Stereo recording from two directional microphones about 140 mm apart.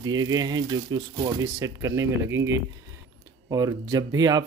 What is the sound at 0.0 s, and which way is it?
Speech, 30° right (ahead or behind).